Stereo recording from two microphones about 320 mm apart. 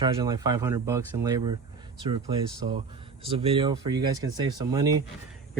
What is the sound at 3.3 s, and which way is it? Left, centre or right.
Speech, centre.